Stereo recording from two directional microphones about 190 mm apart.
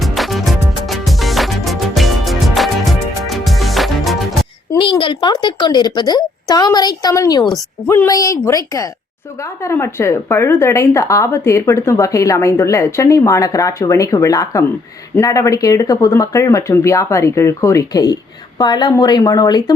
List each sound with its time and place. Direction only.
0.0 s music: centre (ahead or behind)
4.7 s a woman's voice: 25° left (ahead or behind)